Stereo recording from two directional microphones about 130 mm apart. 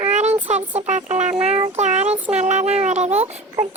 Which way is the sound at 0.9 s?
65° right (ahead or behind).